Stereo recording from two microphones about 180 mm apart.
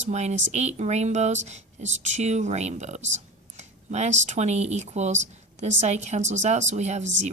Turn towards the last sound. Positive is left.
turn(degrees=-40)  # may be behind; listen again after turning